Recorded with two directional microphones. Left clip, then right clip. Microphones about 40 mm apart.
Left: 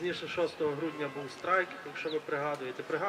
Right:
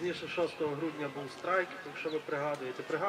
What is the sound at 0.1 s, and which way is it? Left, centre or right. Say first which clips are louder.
Speech: left 1 dB; centre.